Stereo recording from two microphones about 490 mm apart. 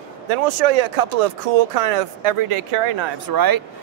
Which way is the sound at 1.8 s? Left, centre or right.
Right.